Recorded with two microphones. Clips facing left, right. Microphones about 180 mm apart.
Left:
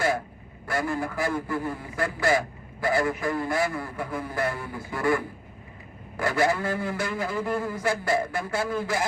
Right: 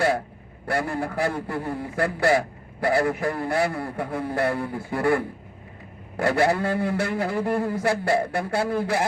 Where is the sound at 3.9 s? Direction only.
65° right (ahead or behind).